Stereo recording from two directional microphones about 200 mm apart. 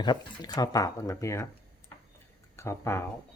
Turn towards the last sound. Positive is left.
turn(degrees=15)  # may be behind; listen again after turning